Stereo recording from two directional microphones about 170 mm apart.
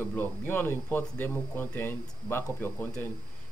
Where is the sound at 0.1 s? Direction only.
10° left (ahead or behind).